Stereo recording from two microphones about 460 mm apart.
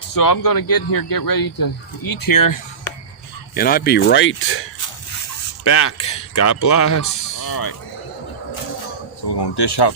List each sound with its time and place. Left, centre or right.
0.1 s speech: left
3.5 s speech: centre
5.6 s speech: left
9.4 s speech: left